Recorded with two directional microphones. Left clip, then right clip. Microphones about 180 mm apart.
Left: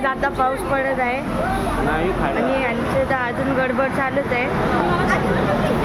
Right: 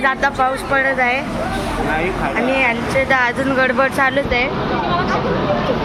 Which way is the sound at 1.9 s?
20° left (ahead or behind).